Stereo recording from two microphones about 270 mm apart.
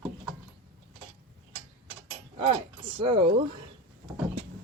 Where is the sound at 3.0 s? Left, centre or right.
Centre.